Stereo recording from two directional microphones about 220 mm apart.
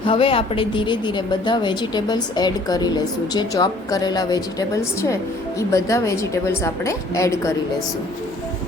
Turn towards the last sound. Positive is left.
turn(degrees=15)  # may be behind; listen again after turning